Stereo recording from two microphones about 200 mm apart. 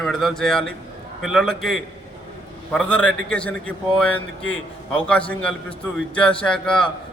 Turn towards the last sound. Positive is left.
turn(degrees=5)  # may be behind; listen again after turning